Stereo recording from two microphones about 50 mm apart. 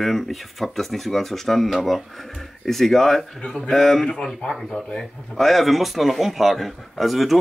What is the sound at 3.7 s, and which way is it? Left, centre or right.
Speech, centre.